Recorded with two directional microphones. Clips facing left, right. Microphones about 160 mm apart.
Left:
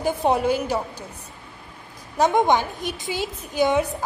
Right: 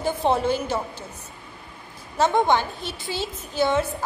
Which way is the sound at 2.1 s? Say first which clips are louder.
Left 1 dB; 15° left (ahead or behind).